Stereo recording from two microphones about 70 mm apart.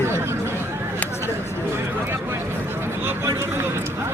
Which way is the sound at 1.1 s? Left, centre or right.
Left.